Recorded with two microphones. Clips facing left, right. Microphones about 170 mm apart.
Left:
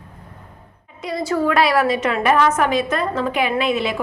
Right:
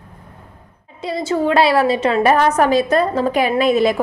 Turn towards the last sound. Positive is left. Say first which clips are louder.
# right 5 dB
turn(degrees=-40)  # may be behind; listen again after turning